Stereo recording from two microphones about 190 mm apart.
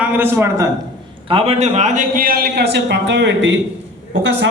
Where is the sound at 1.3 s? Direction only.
30° right (ahead or behind); by 4.4 s 70° right (ahead or behind).